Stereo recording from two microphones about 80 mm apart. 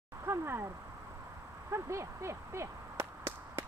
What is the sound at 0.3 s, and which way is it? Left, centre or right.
Speech, right.